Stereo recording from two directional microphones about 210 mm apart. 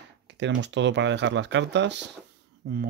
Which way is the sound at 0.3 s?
55° right (ahead or behind).